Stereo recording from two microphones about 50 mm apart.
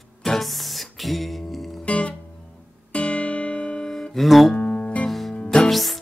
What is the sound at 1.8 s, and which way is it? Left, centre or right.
Music, left.